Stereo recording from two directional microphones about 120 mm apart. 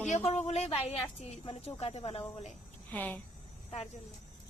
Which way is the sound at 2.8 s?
15° left (ahead or behind).